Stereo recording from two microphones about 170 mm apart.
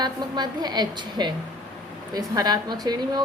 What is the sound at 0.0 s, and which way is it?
A woman's voice, 25° right (ahead or behind).